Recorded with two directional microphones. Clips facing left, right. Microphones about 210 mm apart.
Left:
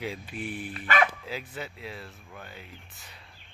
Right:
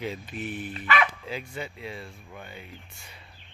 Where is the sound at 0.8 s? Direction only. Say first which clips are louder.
Left 1 dB; 40° left (ahead or behind).